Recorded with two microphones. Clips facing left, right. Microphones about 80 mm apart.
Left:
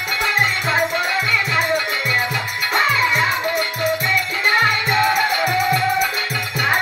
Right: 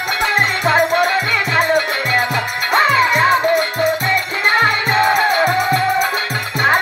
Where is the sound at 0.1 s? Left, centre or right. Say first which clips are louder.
Right 2 dB; right.